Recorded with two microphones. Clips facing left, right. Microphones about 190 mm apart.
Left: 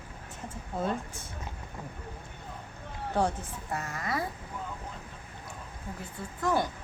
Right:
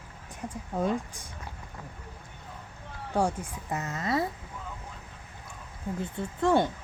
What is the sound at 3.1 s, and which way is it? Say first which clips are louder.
Speech: right 1 dB; 10° right (ahead or behind).